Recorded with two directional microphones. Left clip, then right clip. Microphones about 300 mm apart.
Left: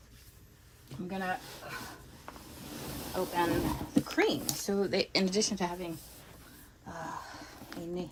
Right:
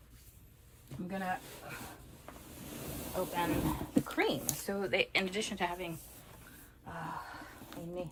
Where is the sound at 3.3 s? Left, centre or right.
Left.